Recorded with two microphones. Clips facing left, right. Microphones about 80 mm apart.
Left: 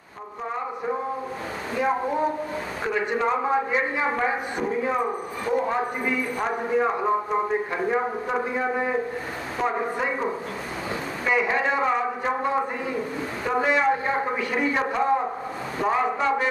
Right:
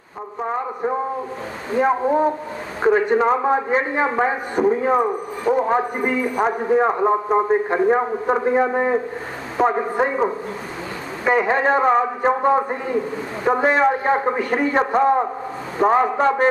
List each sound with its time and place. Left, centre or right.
1.8 s a man's voice: right